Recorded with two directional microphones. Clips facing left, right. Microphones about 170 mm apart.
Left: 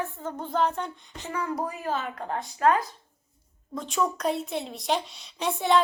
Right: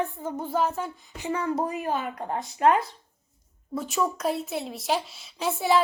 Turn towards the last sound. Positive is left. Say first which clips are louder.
# even
turn(degrees=-5)  # may be behind; listen again after turning